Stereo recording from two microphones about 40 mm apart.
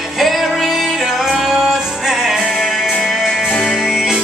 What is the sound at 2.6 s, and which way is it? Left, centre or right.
Music, centre.